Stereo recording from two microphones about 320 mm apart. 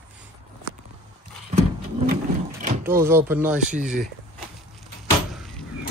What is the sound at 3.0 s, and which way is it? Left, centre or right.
Speech, centre.